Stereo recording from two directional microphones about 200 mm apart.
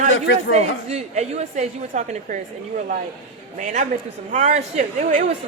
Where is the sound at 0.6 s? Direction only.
30° right (ahead or behind).